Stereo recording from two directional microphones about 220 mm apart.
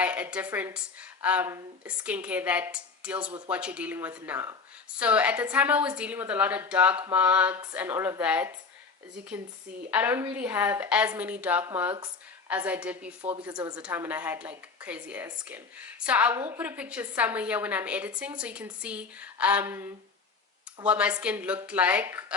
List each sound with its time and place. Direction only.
0.0 s a woman's voice: 5° right (ahead or behind)
9.9 s a woman's voice: 10° right (ahead or behind)
13.5 s a woman's voice: 20° right (ahead or behind)
13.7 s a woman's voice: 5° right (ahead or behind)